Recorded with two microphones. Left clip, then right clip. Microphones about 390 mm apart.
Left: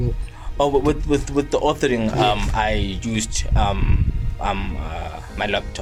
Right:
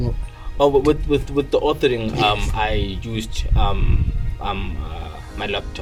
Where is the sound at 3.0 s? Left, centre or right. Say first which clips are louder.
Left 3 dB; centre.